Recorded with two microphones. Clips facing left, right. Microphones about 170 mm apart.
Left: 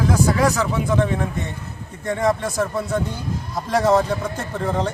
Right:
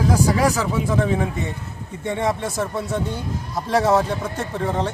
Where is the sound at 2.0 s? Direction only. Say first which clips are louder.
Left 2 dB; 5° right (ahead or behind).